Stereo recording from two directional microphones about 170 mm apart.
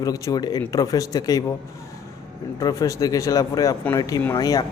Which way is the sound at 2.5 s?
20° left (ahead or behind).